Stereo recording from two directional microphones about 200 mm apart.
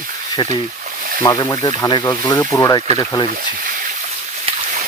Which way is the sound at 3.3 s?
40° right (ahead or behind).